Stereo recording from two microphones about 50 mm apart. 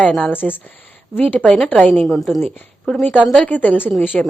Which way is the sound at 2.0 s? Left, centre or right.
Centre.